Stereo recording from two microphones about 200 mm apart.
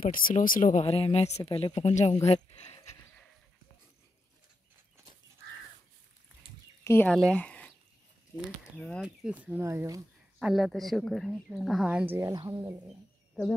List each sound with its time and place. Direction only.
0.0 s speech: 45° left (ahead or behind)
6.8 s speech: 10° left (ahead or behind); by 10.0 s 15° right (ahead or behind)
10.4 s speech: centre (ahead or behind)
12.2 s speech: 15° right (ahead or behind)